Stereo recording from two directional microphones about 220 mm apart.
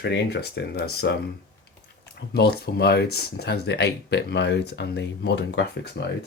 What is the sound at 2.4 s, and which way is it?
Speech, 45° left (ahead or behind).